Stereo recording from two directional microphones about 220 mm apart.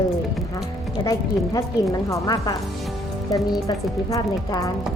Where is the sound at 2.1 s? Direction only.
15° left (ahead or behind).